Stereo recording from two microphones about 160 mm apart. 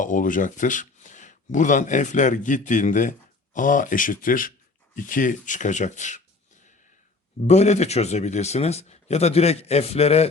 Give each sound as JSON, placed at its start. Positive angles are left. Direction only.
{"t": 0.0, "sound": "speech", "side_deg": 55}
{"t": 7.4, "sound": "speech", "side_deg": 45}